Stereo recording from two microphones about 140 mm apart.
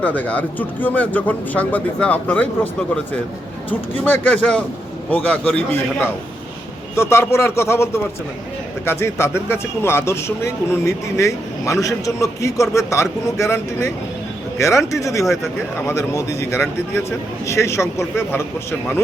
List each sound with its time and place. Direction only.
0.0 s speech: 10° left (ahead or behind)
4.0 s speech: 15° left (ahead or behind)